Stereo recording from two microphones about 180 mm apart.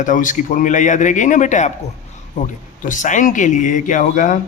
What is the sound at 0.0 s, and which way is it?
A man's voice, 45° left (ahead or behind).